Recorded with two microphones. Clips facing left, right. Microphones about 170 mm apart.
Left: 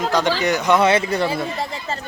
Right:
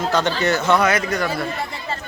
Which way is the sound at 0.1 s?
15° left (ahead or behind).